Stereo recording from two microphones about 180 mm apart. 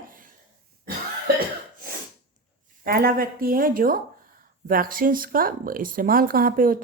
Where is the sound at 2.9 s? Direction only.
55° right (ahead or behind).